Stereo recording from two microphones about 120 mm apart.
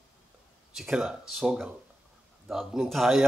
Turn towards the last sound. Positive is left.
turn(degrees=0)  # may be behind; listen again after turning